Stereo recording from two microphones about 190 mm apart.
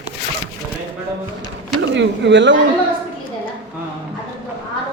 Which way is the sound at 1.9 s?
70° right (ahead or behind).